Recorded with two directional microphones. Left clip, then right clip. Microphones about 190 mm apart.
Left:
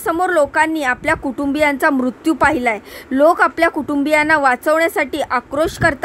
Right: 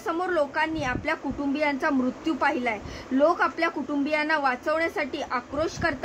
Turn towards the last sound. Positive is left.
turn(degrees=50)  # may be behind; listen again after turning